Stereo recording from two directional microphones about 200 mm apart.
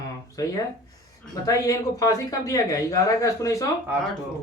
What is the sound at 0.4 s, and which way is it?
Speech, 15° left (ahead or behind).